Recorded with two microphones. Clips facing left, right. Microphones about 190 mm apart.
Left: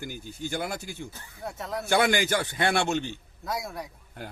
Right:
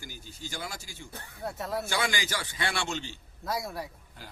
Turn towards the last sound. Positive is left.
turn(degrees=60)  # may be behind; listen again after turning